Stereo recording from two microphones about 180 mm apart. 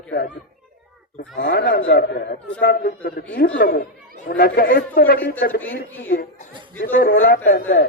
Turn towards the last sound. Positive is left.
turn(degrees=55)  # may be behind; listen again after turning